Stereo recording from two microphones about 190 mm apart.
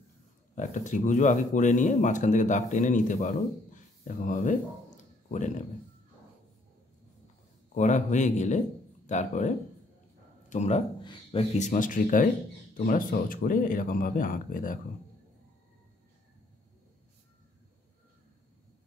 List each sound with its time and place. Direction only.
0.6 s speech: 40° left (ahead or behind)
7.7 s a man's voice: 40° left (ahead or behind)
10.5 s a man's voice: 35° left (ahead or behind)
11.0 s speech: 25° left (ahead or behind)
11.5 s speech: 40° left (ahead or behind)